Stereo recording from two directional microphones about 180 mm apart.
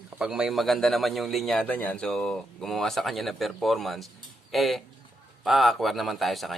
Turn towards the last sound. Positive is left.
turn(degrees=0)  # may be behind; listen again after turning